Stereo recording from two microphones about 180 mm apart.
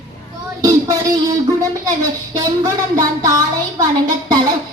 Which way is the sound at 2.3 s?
20° right (ahead or behind).